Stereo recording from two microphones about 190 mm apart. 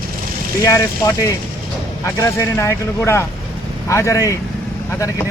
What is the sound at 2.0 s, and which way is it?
Speech, 15° left (ahead or behind).